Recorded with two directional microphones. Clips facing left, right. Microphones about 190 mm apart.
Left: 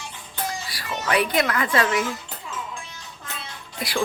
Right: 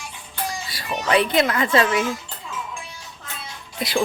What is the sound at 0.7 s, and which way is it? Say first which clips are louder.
A child's voice: right 5 dB; 25° right (ahead or behind).